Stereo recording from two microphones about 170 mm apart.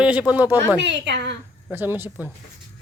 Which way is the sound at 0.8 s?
90° right.